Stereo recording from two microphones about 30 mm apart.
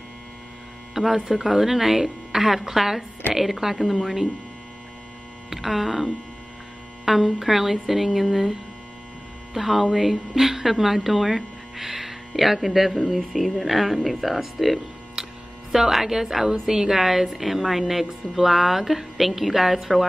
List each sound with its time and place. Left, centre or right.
0.9 s speech: centre
5.5 s speech: centre
15.2 s mains hum: centre
15.7 s a woman's voice: centre